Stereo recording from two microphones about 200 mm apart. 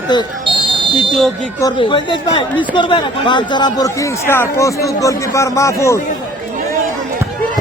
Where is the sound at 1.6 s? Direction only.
25° left (ahead or behind).